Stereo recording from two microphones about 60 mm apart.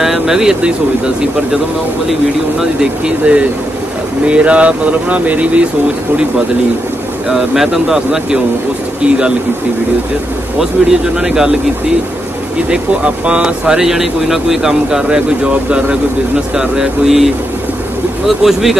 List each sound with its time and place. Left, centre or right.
0.0 s speech: centre
2.6 s speech: centre
7.2 s speech: centre
10.6 s speech: centre
12.6 s speech: centre